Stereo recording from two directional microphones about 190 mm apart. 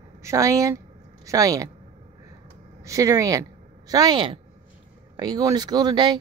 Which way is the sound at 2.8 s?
15° right (ahead or behind).